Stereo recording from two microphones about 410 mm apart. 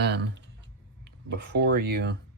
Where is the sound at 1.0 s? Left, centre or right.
Right.